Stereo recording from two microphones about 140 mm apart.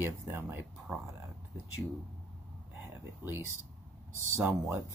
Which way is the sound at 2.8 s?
15° right (ahead or behind).